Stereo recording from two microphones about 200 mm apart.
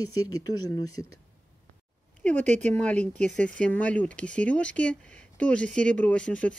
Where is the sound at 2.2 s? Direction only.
5° left (ahead or behind).